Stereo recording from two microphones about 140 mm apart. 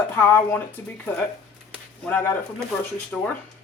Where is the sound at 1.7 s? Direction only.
10° left (ahead or behind).